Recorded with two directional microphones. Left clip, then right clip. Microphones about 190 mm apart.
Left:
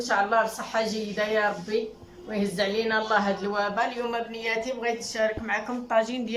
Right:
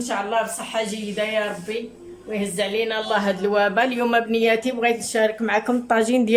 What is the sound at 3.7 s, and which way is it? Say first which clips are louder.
Speech: right 8 dB; 55° right (ahead or behind).